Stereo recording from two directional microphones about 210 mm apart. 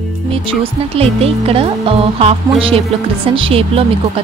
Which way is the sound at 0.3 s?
25° right (ahead or behind).